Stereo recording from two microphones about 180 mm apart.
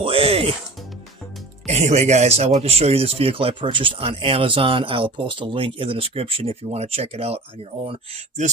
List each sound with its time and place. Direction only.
0.0 s music: 30° right (ahead or behind)
1.6 s speech: 40° right (ahead or behind)